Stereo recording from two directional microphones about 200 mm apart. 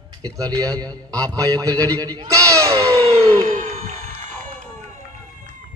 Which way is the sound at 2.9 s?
30° right (ahead or behind).